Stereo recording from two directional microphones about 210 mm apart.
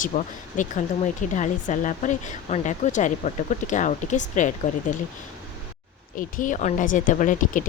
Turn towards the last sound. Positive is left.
turn(degrees=40)  # may be behind; listen again after turning